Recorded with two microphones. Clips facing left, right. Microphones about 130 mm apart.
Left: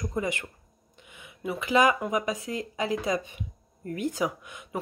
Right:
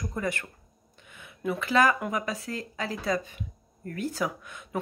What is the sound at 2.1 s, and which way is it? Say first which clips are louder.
Speech: left 3 dB; 15° left (ahead or behind).